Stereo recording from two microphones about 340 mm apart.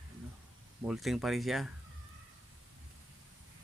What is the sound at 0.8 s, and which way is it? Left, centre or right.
Speech, centre.